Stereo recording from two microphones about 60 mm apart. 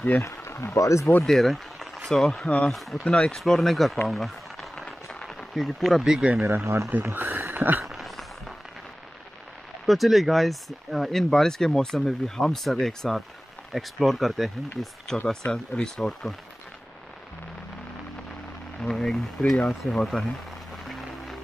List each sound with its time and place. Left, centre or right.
0.2 s speech: left
1.2 s speech: centre; by 2.7 s left
2.7 s speech: centre
3.0 s speech: centre
4.1 s a sound: centre
6.0 s speech: centre
6.4 s speech: right
7.8 s a sound: centre
9.8 s speech: centre
15.2 s speech: centre
18.8 s speech: centre